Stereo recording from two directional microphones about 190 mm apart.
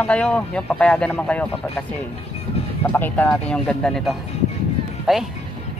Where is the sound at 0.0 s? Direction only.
5° left (ahead or behind).